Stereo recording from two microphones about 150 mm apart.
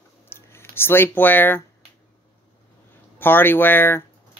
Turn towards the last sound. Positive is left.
turn(degrees=15)  # may be behind; listen again after turning